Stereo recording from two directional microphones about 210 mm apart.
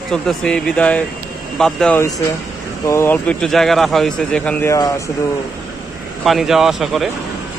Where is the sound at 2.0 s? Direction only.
15° left (ahead or behind).